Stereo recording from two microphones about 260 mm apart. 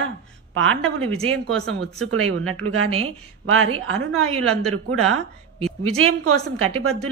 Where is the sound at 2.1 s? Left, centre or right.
Right.